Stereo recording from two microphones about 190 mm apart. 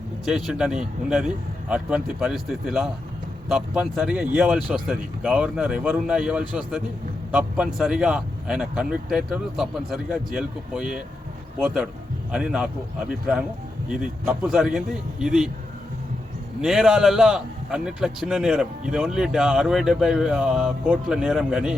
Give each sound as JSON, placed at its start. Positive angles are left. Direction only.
{"t": 0.3, "sound": "a man's voice", "side_deg": 0}
{"t": 16.6, "sound": "a man's voice", "side_deg": 0}